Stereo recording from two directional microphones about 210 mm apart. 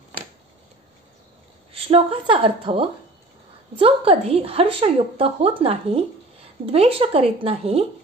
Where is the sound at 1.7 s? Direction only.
25° right (ahead or behind).